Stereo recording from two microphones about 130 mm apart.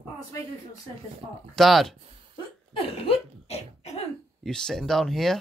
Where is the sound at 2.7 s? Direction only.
45° left (ahead or behind).